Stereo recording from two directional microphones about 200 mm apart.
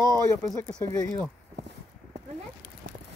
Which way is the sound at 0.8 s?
15° left (ahead or behind).